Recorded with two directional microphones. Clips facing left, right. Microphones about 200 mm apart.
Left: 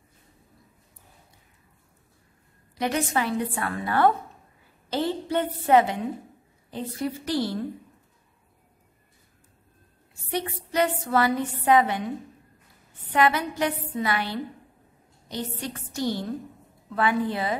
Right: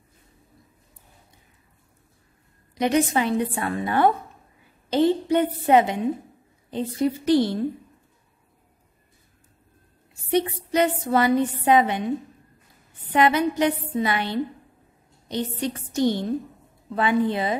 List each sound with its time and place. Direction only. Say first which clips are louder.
2.7 s a woman's voice: right 5 dB; 20° right (ahead or behind)
10.3 s a woman's voice: right 5 dB; 20° right (ahead or behind)
13.1 s a woman's voice: right 3 dB; 20° right (ahead or behind)